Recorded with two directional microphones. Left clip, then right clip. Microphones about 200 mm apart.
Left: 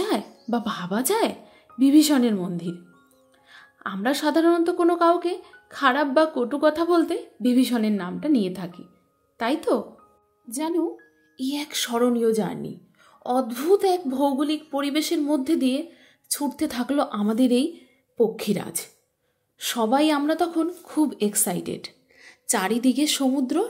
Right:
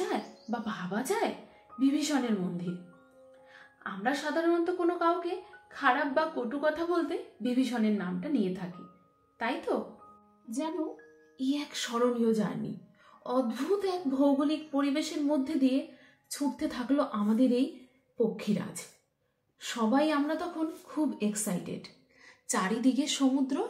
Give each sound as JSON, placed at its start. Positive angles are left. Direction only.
{"t": 0.0, "sound": "speech", "side_deg": 60}
{"t": 9.7, "sound": "speech", "side_deg": 60}
{"t": 11.3, "sound": "a woman's voice", "side_deg": 50}
{"t": 19.6, "sound": "a woman's voice", "side_deg": 55}